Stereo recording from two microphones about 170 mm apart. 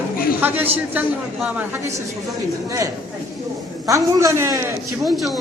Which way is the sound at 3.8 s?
15° right (ahead or behind).